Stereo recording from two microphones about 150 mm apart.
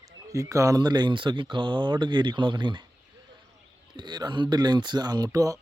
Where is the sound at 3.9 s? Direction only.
30° right (ahead or behind).